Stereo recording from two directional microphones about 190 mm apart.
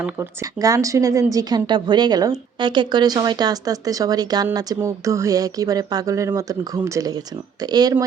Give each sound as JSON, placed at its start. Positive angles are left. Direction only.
{"t": 0.0, "sound": "speech", "side_deg": -15}